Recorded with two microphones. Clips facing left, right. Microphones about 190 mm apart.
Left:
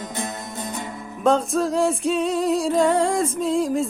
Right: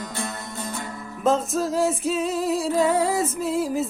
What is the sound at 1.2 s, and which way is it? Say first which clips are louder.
Music: left 2 dB; centre (ahead or behind).